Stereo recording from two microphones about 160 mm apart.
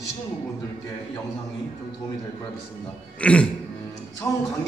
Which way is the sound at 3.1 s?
5° left (ahead or behind).